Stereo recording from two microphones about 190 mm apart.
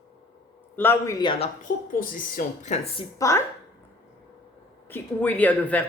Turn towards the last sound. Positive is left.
turn(degrees=10)  # may be behind; listen again after turning